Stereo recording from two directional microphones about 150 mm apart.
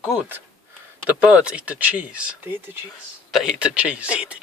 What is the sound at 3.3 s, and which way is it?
Speech, 5° right (ahead or behind).